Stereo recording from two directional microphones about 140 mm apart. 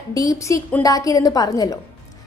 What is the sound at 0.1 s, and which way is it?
A woman's voice, 25° left (ahead or behind).